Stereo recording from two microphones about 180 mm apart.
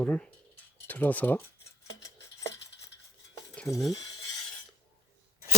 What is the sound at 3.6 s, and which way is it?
Speech, centre (ahead or behind).